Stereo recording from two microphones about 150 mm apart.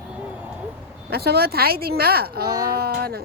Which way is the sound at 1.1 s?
90° right.